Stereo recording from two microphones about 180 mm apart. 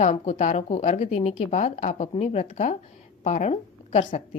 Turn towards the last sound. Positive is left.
turn(degrees=40)  # may be behind; listen again after turning